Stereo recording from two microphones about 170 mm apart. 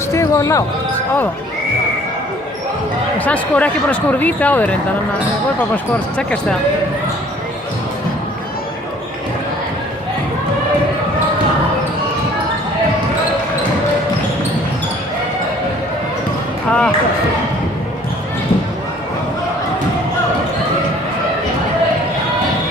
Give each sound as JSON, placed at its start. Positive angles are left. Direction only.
{"t": 0.1, "sound": "basketball bounce", "side_deg": 20}
{"t": 3.2, "sound": "speech", "side_deg": 10}
{"t": 5.7, "sound": "speech", "side_deg": 5}
{"t": 16.6, "sound": "speech", "side_deg": 5}